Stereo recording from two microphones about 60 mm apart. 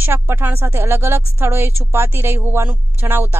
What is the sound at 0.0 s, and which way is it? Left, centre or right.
Speech, right.